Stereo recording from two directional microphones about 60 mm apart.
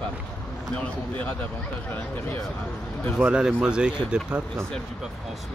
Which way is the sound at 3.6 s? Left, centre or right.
Centre.